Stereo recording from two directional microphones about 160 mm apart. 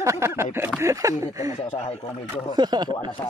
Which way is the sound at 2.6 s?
25° right (ahead or behind).